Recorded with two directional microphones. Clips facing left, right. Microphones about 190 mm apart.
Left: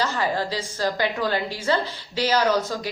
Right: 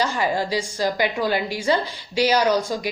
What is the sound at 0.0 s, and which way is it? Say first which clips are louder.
A woman's voice: right 2 dB; 15° right (ahead or behind).